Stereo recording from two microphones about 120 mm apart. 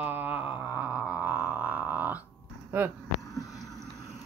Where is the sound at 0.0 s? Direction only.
15° right (ahead or behind).